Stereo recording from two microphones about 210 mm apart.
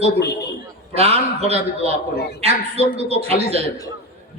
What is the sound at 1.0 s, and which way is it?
A man's voice, 30° right (ahead or behind).